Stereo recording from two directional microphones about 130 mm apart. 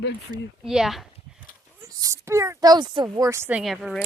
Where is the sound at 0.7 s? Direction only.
5° right (ahead or behind).